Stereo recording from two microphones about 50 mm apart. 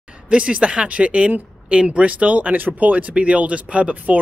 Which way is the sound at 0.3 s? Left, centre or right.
Right.